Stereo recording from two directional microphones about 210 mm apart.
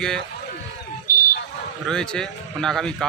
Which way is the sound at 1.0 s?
40° left (ahead or behind).